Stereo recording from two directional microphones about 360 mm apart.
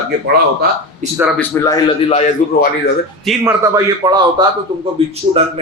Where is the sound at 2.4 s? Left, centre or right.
Left.